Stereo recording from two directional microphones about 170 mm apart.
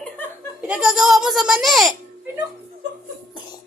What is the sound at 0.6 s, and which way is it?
A child's voice, 5° right (ahead or behind).